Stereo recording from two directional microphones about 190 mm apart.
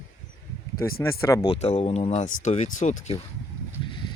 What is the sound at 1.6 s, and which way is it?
Speech, 30° left (ahead or behind).